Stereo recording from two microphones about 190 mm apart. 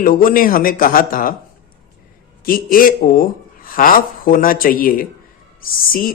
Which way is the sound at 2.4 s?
50° left (ahead or behind).